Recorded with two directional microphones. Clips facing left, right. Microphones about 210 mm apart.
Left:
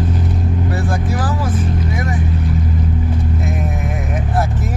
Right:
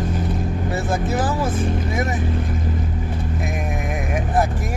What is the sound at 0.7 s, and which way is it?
Speech, 25° right (ahead or behind).